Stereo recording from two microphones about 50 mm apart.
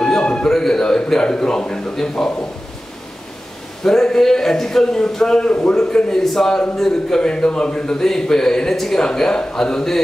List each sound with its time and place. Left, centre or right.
0.0 s a man's voice: centre
3.8 s a man's voice: centre